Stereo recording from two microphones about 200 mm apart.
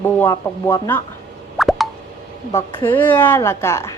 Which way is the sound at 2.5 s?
20° left (ahead or behind).